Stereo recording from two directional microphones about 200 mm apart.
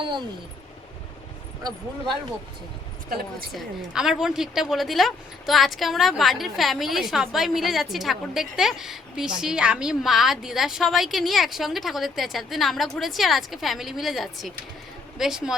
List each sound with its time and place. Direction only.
0.0 s speech: 25° right (ahead or behind)
1.6 s speech: 20° right (ahead or behind)
3.5 s a woman's voice: centre (ahead or behind)